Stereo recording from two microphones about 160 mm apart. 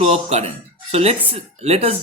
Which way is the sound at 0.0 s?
40° right (ahead or behind).